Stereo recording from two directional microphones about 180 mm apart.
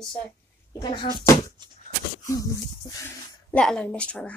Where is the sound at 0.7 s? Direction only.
25° left (ahead or behind).